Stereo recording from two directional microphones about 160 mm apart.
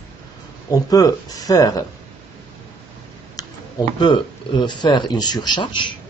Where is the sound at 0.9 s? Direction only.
25° left (ahead or behind).